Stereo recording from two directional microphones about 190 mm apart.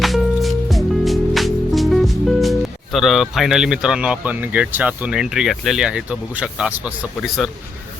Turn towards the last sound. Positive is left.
turn(degrees=0)  # may be behind; listen again after turning